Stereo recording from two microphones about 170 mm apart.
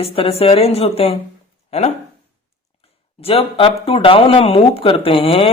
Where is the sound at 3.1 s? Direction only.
35° left (ahead or behind).